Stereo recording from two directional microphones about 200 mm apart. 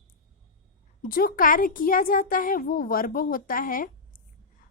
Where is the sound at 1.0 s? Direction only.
45° left (ahead or behind).